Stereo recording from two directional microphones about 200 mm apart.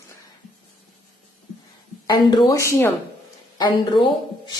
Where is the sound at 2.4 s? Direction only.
15° left (ahead or behind).